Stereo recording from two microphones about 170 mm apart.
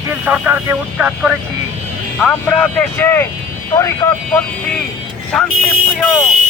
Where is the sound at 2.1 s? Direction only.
10° left (ahead or behind).